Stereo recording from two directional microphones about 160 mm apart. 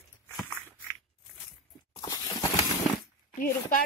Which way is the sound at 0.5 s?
10° left (ahead or behind).